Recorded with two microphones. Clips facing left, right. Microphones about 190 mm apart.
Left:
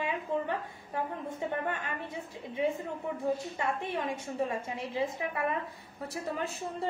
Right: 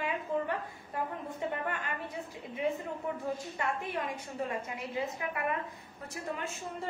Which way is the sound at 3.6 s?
25° left (ahead or behind).